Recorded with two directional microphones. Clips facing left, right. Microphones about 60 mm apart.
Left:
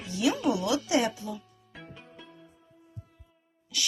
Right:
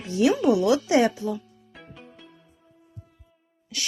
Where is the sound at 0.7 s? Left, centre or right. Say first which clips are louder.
Right 6 dB; right.